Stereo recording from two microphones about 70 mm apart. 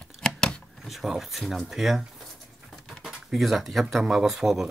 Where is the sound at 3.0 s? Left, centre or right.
Centre.